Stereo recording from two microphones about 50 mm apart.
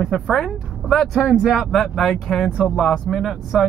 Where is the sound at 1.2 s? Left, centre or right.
Centre.